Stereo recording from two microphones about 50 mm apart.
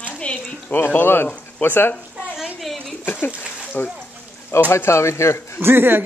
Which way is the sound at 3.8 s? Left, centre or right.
Left.